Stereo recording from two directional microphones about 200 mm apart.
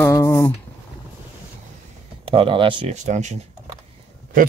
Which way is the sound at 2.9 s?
35° right (ahead or behind).